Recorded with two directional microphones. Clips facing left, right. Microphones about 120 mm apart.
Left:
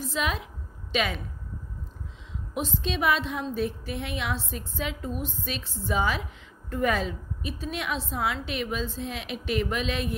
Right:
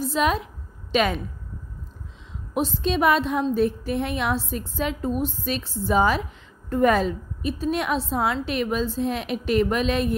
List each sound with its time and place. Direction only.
0.0 s a woman's voice: 40° right (ahead or behind)
2.5 s a woman's voice: 40° right (ahead or behind)